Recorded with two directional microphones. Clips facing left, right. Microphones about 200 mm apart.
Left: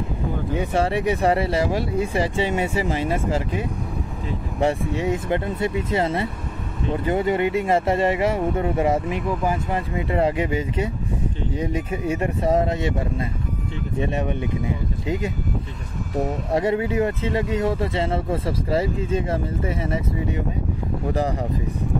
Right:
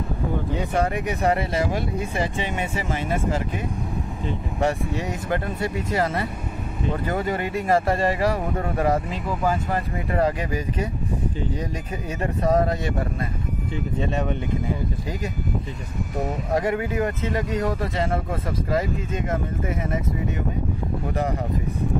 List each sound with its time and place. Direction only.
0.7 s speech: 30° left (ahead or behind)
13.9 s speech: 15° left (ahead or behind)
16.5 s speech: 25° left (ahead or behind)